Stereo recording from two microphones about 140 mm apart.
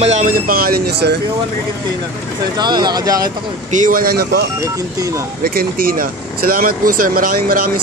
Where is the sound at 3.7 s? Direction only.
75° right (ahead or behind); by 7.6 s 90° right.